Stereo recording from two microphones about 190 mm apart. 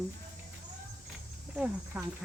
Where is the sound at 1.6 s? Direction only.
5° right (ahead or behind).